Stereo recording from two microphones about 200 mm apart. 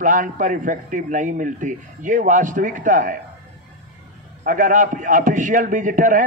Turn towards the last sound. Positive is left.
turn(degrees=-40)  # may be behind; listen again after turning